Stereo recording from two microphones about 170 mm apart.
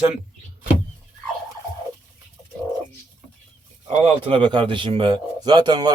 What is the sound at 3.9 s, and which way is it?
Speech, 30° right (ahead or behind).